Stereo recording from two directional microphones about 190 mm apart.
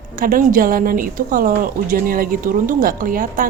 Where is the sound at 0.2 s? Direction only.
45° right (ahead or behind).